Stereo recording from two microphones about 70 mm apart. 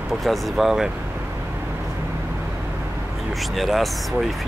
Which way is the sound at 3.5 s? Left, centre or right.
Centre.